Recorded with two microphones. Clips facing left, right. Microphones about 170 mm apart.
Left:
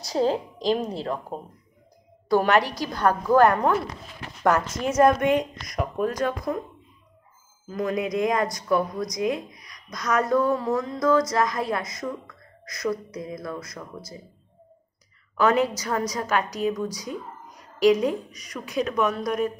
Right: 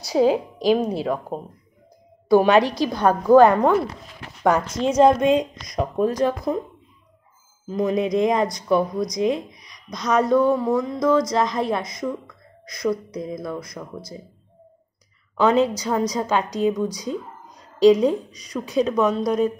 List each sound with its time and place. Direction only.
0.0 s a woman's voice: 5° right (ahead or behind); by 6.6 s 25° right (ahead or behind)
7.6 s a woman's voice: 20° right (ahead or behind)
15.3 s a woman's voice: 25° right (ahead or behind)